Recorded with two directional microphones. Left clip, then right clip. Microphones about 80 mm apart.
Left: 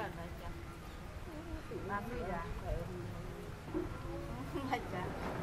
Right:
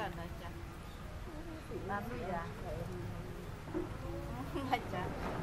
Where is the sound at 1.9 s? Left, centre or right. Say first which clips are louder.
Right 1 dB; centre.